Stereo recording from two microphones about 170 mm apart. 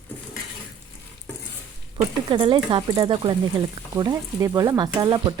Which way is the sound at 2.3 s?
30° right (ahead or behind).